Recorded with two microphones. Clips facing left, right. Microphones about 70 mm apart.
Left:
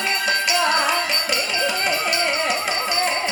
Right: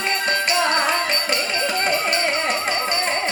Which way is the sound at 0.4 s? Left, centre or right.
Right.